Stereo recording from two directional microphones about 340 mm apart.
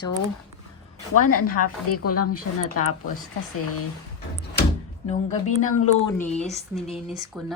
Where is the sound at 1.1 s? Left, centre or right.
Left.